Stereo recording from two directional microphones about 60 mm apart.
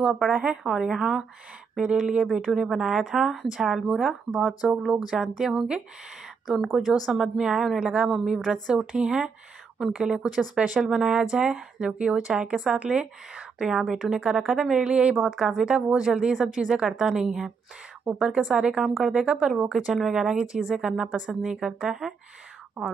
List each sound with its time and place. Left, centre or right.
0.3 s a woman's voice: centre
14.9 s speech: centre